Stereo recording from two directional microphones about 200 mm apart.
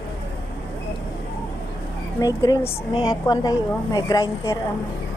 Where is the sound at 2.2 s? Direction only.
15° left (ahead or behind).